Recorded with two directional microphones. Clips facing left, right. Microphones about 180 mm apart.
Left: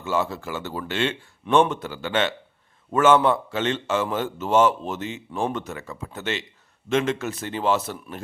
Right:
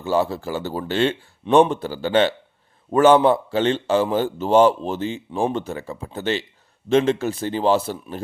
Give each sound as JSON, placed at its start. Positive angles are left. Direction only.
{"t": 0.0, "sound": "a man's voice", "side_deg": -35}